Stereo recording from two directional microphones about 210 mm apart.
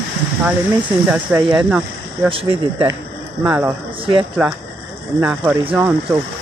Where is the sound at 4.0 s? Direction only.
25° right (ahead or behind).